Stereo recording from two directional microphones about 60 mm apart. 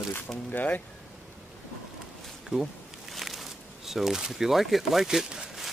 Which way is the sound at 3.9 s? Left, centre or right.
Centre.